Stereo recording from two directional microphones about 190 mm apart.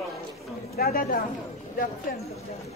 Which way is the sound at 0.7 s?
50° left (ahead or behind).